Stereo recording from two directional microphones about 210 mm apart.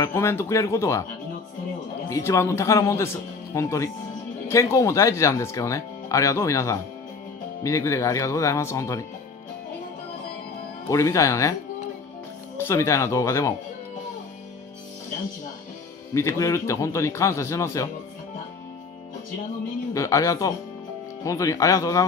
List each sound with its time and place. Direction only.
0.0 s speech: 10° left (ahead or behind)
2.0 s speech: 15° left (ahead or behind)
10.9 s speech: 15° left (ahead or behind)
12.5 s speech: 15° left (ahead or behind)
16.1 s speech: 15° left (ahead or behind)
19.9 s speech: 15° left (ahead or behind)